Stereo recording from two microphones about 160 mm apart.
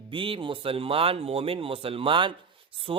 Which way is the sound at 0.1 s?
30° right (ahead or behind).